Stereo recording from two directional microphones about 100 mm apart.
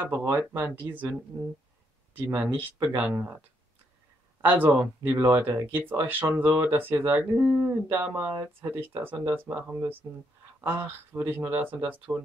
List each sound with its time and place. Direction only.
0.0 s speech: 20° right (ahead or behind)
2.1 s speech: 15° right (ahead or behind)
4.5 s speech: 15° right (ahead or behind)
5.0 s speech: 25° right (ahead or behind)